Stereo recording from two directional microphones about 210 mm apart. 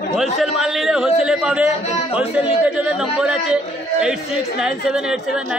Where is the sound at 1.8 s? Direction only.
30° left (ahead or behind).